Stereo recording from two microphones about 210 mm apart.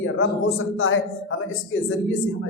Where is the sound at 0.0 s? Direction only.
65° left (ahead or behind).